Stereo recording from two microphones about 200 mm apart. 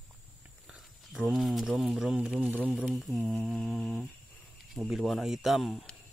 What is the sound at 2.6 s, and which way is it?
Mantra, centre (ahead or behind).